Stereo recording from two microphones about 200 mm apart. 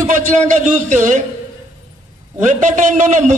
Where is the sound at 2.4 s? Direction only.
40° right (ahead or behind).